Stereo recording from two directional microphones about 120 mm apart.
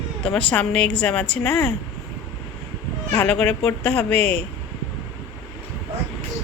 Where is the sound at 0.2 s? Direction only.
10° left (ahead or behind).